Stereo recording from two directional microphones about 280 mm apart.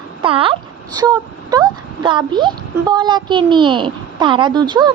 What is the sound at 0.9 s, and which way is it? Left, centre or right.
Speech, centre.